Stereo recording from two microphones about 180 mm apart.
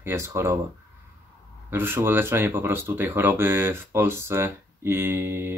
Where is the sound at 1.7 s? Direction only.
10° right (ahead or behind).